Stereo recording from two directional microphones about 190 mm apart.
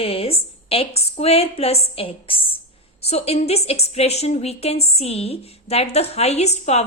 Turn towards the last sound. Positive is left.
turn(degrees=35)  # may be behind; listen again after turning